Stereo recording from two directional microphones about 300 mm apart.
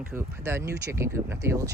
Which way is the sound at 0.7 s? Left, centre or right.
Right.